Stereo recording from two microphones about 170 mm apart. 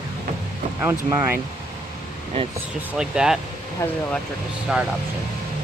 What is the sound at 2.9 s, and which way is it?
Speech, 5° right (ahead or behind).